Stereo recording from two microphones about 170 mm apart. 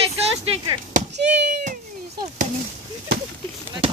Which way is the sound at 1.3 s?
45° right (ahead or behind).